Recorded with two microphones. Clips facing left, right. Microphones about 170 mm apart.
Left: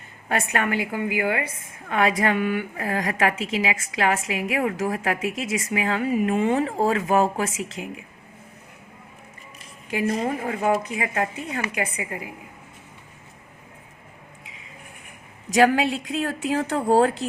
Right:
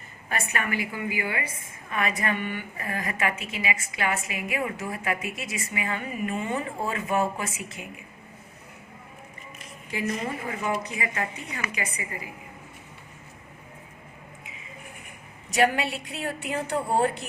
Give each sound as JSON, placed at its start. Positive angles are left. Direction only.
{"t": 0.3, "sound": "a woman's voice", "side_deg": 65}
{"t": 1.9, "sound": "a woman's voice", "side_deg": 90}
{"t": 9.9, "sound": "speech", "side_deg": 50}
{"t": 11.7, "sound": "a woman's voice", "side_deg": 55}
{"t": 15.4, "sound": "a woman's voice", "side_deg": 90}